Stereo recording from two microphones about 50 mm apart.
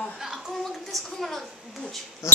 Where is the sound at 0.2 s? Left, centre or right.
Centre.